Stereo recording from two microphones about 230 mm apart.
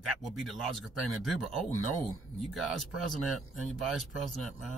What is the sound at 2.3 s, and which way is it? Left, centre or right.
Speech, centre.